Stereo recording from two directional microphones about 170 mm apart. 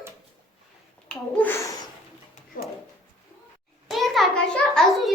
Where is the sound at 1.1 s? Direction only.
10° left (ahead or behind).